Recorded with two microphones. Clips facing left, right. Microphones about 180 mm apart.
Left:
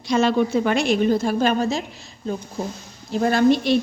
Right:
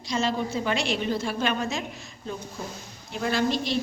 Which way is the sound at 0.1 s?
65° left (ahead or behind).